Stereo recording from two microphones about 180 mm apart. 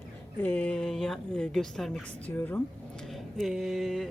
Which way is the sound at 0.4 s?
10° left (ahead or behind).